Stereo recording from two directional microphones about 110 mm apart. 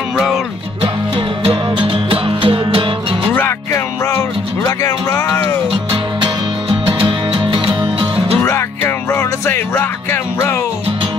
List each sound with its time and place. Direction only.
1.4 s music: 50° right (ahead or behind)
3.3 s music: 20° left (ahead or behind)
6.2 s music: 50° right (ahead or behind)
8.5 s music: 25° left (ahead or behind)